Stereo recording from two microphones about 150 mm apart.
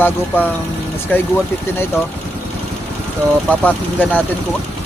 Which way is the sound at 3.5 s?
10° left (ahead or behind).